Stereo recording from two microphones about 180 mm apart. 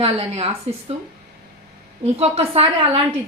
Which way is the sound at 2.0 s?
35° right (ahead or behind).